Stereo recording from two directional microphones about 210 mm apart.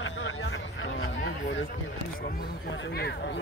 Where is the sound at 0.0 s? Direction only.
70° left (ahead or behind).